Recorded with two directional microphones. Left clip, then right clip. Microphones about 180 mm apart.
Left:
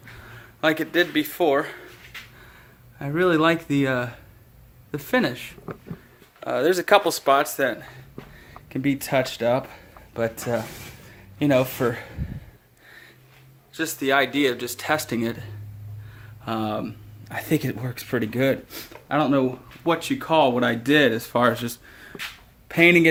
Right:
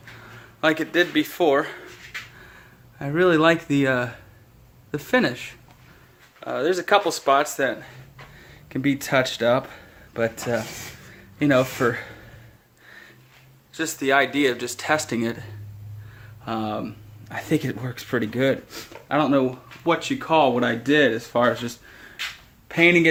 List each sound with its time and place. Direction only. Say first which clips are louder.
0.3 s speech: right 1 dB; 5° left (ahead or behind)
6.4 s speech: left 2 dB; 30° left (ahead or behind)
8.7 s speech: right 1 dB; centre (ahead or behind)
13.7 s speech: right 1 dB; 10° left (ahead or behind)
16.5 s speech: left 1 dB; 20° left (ahead or behind)
21.5 s a sound: right 1 dB; 15° left (ahead or behind)
22.7 s speech: left 1 dB; 20° left (ahead or behind)